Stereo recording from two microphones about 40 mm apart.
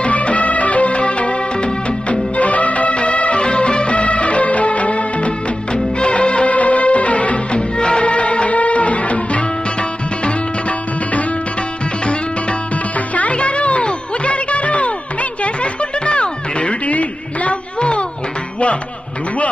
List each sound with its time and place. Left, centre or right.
0.0 s music of bollywood: left
12.0 s music: left